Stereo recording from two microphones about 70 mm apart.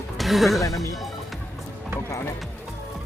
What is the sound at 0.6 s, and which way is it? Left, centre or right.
Speech, left.